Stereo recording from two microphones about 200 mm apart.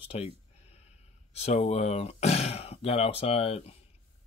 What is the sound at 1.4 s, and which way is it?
Speech, 35° left (ahead or behind).